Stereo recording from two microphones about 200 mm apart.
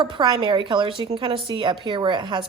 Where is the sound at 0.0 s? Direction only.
25° right (ahead or behind).